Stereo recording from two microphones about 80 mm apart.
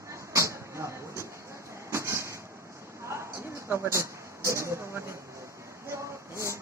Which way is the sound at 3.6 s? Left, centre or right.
Right.